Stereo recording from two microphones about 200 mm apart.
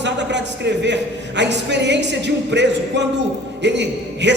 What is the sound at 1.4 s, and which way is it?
Speech, 60° right (ahead or behind).